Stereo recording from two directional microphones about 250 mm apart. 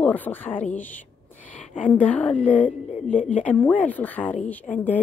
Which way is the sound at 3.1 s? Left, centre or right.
Left.